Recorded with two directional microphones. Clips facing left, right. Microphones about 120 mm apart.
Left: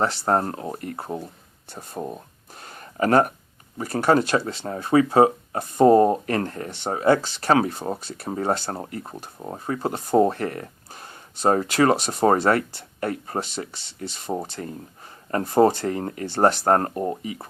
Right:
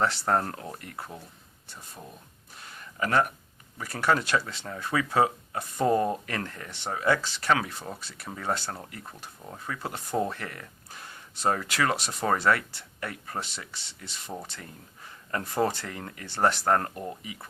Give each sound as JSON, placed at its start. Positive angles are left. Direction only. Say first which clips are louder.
{"t": 0.0, "sound": "speech", "louder": "left 4 dB", "side_deg": 30}
{"t": 1.7, "sound": "a sound", "louder": "left 13 dB", "side_deg": 55}
{"t": 3.8, "sound": "speech", "louder": "left 7 dB", "side_deg": 35}